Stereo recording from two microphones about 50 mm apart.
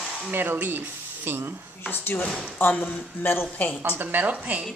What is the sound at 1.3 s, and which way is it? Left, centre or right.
Speech, right.